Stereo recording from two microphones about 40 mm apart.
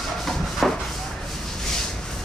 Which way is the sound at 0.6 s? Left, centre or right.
Centre.